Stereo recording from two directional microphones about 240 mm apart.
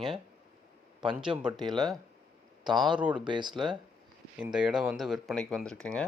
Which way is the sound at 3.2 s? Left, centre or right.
Centre.